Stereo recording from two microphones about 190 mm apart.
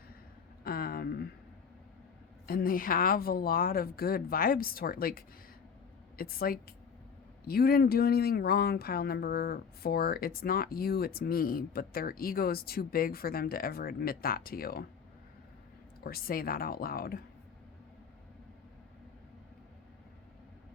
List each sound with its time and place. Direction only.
0.6 s a sound: 50° left (ahead or behind)
2.5 s speech: 50° left (ahead or behind)
16.0 s speech: 50° left (ahead or behind)